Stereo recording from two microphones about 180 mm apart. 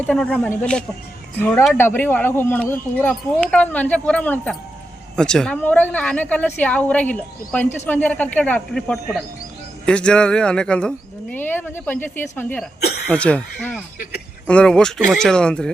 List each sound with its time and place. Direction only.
0.0 s speech: 5° left (ahead or behind)
12.8 s cough: 60° left (ahead or behind)
13.1 s speech: 5° left (ahead or behind)